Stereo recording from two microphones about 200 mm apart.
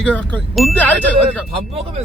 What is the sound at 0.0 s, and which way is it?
Speech, 5° left (ahead or behind).